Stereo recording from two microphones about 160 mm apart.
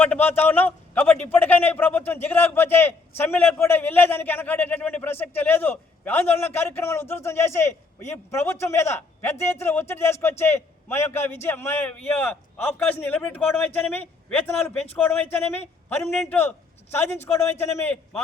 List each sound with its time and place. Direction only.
0.0 s a man's voice: 10° left (ahead or behind)